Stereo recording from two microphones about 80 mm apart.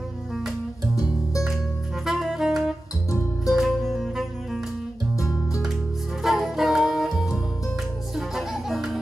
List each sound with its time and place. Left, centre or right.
2.0 s saxophone: centre
3.4 s music: centre
5.1 s music: left
6.2 s music: centre